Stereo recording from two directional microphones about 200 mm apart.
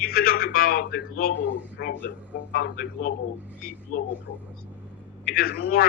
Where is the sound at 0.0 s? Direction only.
45° left (ahead or behind).